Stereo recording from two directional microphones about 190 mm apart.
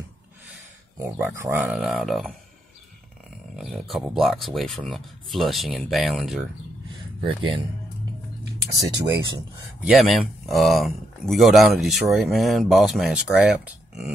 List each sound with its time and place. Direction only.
0.9 s speech: 15° right (ahead or behind)
3.5 s speech: centre (ahead or behind)
7.2 s speech: 30° right (ahead or behind)
8.7 s speech: 15° right (ahead or behind)
9.8 s speech: centre (ahead or behind)